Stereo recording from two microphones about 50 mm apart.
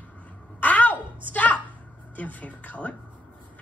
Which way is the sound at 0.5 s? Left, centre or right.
Left.